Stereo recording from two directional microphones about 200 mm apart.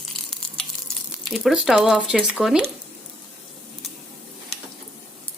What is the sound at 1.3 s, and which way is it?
Speech, centre (ahead or behind).